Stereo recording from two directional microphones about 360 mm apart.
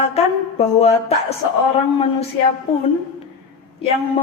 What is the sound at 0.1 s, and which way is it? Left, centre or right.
A woman's voice, centre.